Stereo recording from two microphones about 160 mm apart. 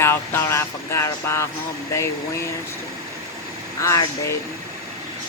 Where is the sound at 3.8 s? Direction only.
20° left (ahead or behind).